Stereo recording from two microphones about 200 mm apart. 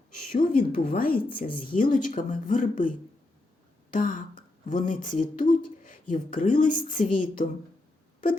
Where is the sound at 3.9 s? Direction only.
40° left (ahead or behind).